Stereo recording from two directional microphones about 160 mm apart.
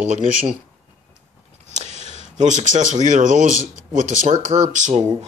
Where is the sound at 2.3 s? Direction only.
50° right (ahead or behind).